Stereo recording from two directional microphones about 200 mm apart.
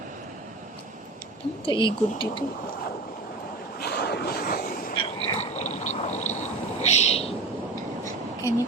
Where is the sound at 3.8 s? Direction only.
55° left (ahead or behind).